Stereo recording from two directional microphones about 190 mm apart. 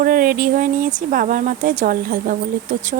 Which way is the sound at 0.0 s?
50° right (ahead or behind).